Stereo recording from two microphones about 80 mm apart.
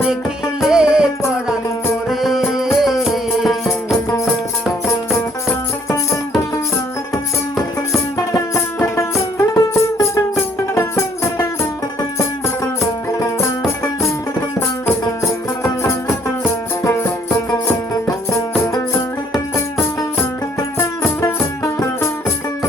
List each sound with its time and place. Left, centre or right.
0.6 s music: centre
2.0 s music: centre
8.3 s music: left
13.1 s music: left
15.2 s music: left
20.7 s music: left